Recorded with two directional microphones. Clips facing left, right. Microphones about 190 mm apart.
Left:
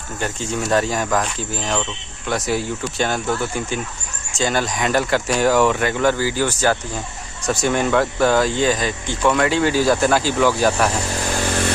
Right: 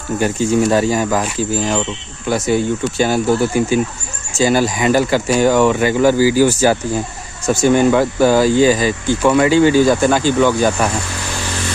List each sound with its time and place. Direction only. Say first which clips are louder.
0.2 s speech: right 9 dB; 5° right (ahead or behind)
11.1 s vehicle: left 3 dB; 45° left (ahead or behind)